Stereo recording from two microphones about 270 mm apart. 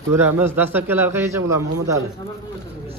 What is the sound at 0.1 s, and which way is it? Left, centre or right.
Speech, centre.